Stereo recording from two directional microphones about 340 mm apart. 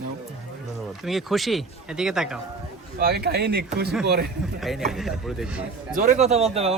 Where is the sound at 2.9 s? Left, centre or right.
Right.